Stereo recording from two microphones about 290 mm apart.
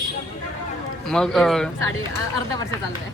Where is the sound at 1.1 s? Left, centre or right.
Centre.